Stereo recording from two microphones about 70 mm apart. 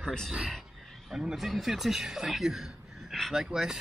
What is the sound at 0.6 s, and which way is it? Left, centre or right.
Speech, centre.